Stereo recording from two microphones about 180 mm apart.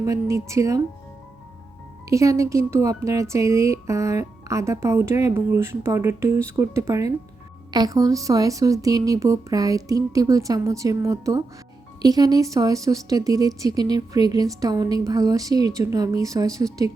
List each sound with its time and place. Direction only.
0.0 s speech: 15° right (ahead or behind)
2.0 s speech: 15° right (ahead or behind)